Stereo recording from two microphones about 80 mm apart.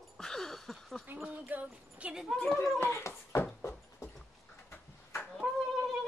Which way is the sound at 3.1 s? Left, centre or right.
Left.